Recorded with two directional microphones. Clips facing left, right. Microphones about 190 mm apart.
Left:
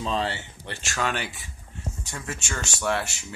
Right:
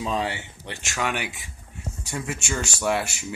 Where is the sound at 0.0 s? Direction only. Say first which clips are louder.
Right 1 dB; 10° right (ahead or behind).